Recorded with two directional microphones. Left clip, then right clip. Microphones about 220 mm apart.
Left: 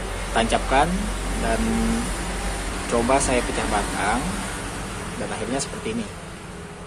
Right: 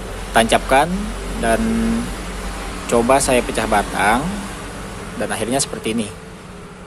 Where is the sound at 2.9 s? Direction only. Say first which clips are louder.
Right 6 dB; 25° right (ahead or behind).